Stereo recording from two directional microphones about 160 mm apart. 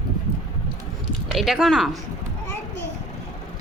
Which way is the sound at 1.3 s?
Centre (ahead or behind).